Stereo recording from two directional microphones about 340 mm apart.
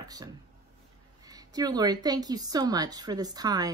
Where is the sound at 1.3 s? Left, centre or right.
Centre.